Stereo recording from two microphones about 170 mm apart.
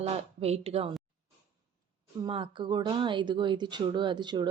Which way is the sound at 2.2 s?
30° right (ahead or behind).